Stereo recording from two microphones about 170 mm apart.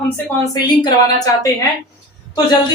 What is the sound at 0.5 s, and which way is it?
A woman's voice, 25° left (ahead or behind).